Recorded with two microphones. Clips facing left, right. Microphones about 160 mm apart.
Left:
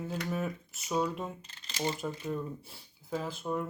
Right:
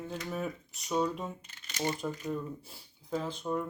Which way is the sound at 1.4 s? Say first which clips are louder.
Even; 30° left (ahead or behind).